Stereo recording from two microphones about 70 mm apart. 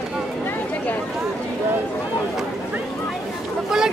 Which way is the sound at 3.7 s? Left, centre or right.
Centre.